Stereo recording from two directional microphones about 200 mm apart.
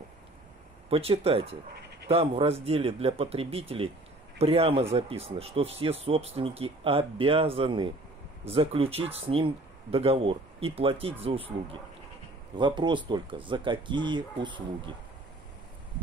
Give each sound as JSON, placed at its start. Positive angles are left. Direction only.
{"t": 0.8, "sound": "speech", "side_deg": -30}